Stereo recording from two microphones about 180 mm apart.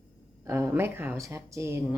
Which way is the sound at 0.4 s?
15° right (ahead or behind).